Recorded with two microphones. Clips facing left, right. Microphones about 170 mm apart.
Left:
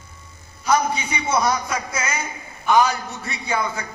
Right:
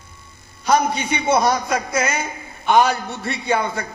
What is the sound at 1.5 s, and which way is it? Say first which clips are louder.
A man's voice: right 4 dB; 60° right (ahead or behind).